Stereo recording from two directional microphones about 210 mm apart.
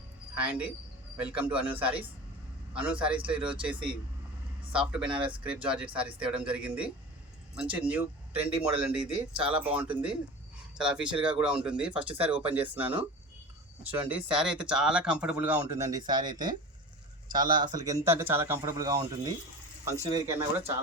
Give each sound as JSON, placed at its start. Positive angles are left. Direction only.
{"t": 0.3, "sound": "speech", "side_deg": -5}
{"t": 4.9, "sound": "speech", "side_deg": -5}
{"t": 10.8, "sound": "speech", "side_deg": -5}
{"t": 14.1, "sound": "speech", "side_deg": -5}